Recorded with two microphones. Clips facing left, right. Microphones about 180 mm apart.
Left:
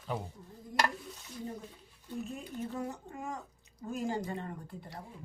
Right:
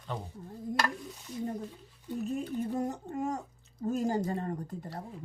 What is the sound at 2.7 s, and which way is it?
Speech, 40° right (ahead or behind).